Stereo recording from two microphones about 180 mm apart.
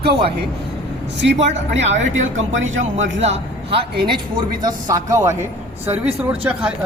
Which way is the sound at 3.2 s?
35° right (ahead or behind).